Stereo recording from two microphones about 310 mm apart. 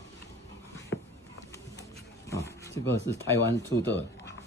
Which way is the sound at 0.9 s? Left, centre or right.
Left.